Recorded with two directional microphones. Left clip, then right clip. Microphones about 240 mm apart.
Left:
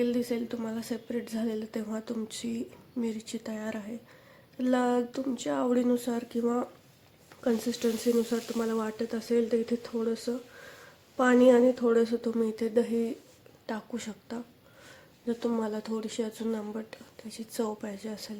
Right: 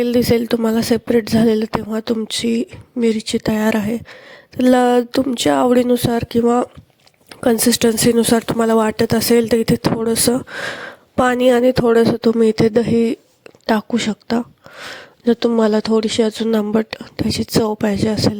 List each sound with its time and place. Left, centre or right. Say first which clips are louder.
0.0 s speech: right 15 dB; right